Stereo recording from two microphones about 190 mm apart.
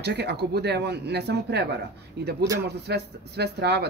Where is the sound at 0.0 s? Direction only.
60° right (ahead or behind).